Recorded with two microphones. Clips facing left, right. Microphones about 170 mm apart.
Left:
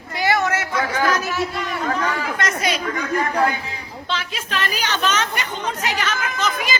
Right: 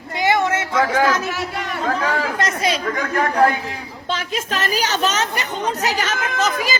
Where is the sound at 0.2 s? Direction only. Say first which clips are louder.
Right 2 dB; 25° right (ahead or behind).